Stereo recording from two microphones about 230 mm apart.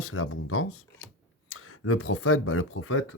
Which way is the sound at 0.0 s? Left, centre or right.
Left.